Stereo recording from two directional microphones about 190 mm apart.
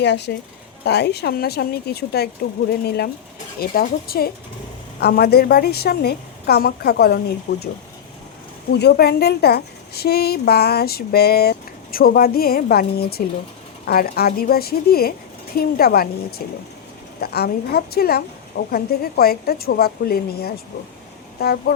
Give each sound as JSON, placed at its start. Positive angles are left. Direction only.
{"t": 0.0, "sound": "a woman's voice", "side_deg": 65}
{"t": 8.7, "sound": "a woman's voice", "side_deg": 55}